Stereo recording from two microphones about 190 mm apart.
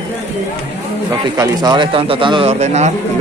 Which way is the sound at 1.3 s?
20° right (ahead or behind).